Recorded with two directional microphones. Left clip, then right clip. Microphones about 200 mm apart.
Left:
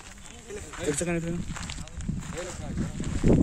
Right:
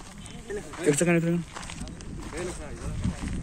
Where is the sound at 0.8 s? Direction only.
5° right (ahead or behind).